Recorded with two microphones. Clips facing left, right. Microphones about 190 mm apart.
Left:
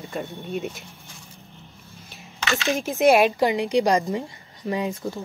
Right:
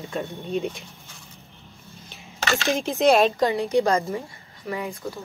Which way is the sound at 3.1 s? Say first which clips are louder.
Left 1 dB; 15° left (ahead or behind).